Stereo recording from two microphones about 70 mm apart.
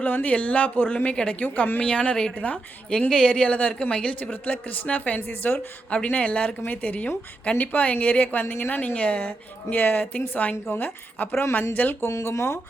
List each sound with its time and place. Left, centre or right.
0.0 s a woman's voice: left
5.9 s a woman's voice: centre
11.9 s speech: left